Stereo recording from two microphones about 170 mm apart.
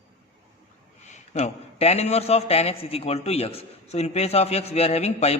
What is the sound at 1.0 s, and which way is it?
A man's voice, 40° left (ahead or behind).